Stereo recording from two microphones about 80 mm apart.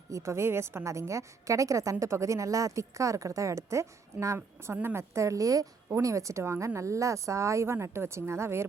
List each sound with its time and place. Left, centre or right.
0.1 s a woman's voice: right